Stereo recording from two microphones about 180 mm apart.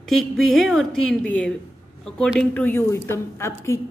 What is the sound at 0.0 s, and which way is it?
A woman's voice, centre (ahead or behind).